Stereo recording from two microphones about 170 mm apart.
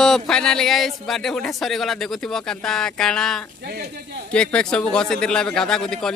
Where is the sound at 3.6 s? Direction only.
65° right (ahead or behind).